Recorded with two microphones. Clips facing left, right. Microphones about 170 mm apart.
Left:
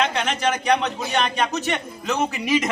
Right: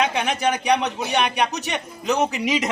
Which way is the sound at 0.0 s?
10° right (ahead or behind).